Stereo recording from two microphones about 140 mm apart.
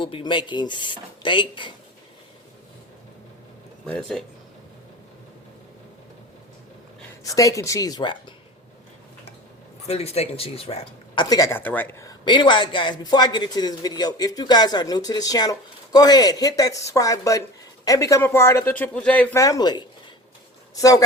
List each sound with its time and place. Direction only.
0.0 s speech: 35° left (ahead or behind)
3.8 s speech: 5° left (ahead or behind)
7.3 s speech: 25° left (ahead or behind)
9.8 s speech: 50° left (ahead or behind); by 12.1 s 20° left (ahead or behind)
12.2 s speech: 35° left (ahead or behind); by 19.4 s 10° left (ahead or behind)
19.4 s speech: 25° left (ahead or behind)